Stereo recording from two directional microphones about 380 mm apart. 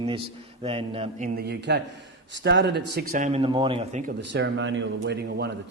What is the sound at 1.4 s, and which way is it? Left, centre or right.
A man's voice, right.